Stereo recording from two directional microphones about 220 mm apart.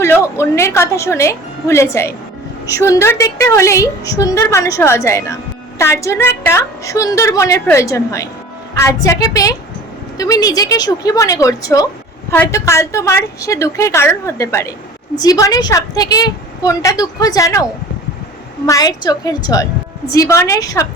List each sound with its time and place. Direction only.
0.0 s a woman's voice: 10° left (ahead or behind)